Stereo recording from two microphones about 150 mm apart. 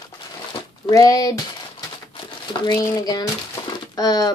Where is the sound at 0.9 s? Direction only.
25° left (ahead or behind).